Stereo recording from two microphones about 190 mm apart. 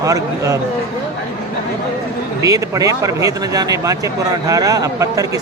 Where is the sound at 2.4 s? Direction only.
20° right (ahead or behind).